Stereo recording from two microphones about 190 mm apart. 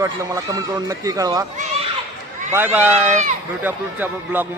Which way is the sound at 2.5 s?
10° right (ahead or behind).